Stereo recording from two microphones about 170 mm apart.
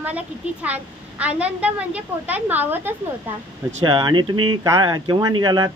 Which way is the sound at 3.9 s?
25° right (ahead or behind).